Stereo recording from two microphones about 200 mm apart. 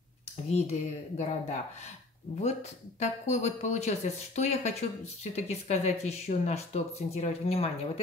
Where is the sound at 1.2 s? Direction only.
35° left (ahead or behind).